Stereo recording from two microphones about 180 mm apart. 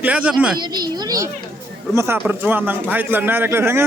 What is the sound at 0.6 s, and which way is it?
Speech, 20° right (ahead or behind).